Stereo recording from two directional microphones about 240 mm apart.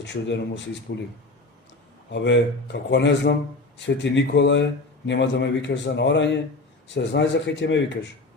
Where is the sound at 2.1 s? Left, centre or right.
Left.